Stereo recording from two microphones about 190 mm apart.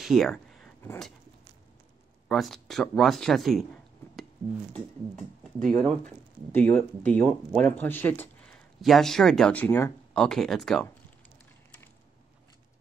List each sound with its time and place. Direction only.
0.0 s a sound: centre (ahead or behind)
0.8 s speech: centre (ahead or behind)
2.2 s speech: centre (ahead or behind)
5.7 s speech: 5° left (ahead or behind)
10.1 s speech: 5° left (ahead or behind)